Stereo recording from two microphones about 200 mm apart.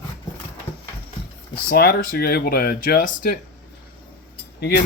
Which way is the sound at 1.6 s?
50° left (ahead or behind).